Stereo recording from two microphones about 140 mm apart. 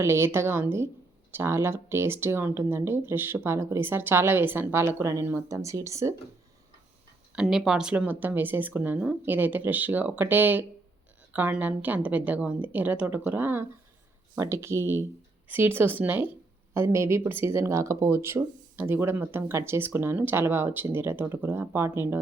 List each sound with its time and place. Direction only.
0.0 s speech: 20° right (ahead or behind)
7.3 s speech: centre (ahead or behind)